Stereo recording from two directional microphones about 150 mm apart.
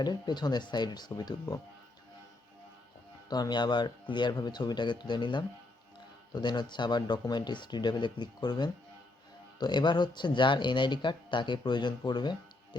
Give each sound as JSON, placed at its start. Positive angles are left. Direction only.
{"t": 0.0, "sound": "speech", "side_deg": 30}
{"t": 3.2, "sound": "speech", "side_deg": 25}